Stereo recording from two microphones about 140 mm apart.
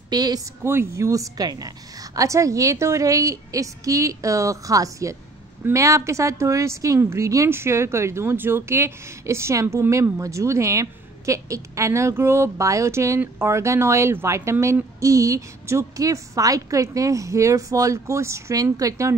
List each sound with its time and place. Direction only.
0.1 s speech: 30° right (ahead or behind)
0.7 s a woman's voice: 20° right (ahead or behind)